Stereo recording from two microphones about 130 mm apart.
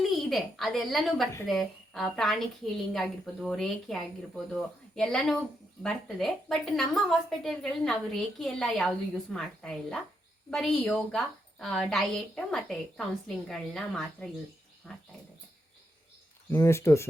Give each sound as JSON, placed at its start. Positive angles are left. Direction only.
{"t": 0.0, "sound": "a woman's voice", "side_deg": 0}
{"t": 16.5, "sound": "speech", "side_deg": 20}